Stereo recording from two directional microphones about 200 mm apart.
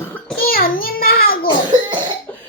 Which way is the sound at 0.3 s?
45° left (ahead or behind).